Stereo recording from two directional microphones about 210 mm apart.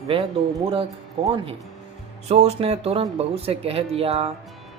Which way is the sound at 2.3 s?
30° right (ahead or behind).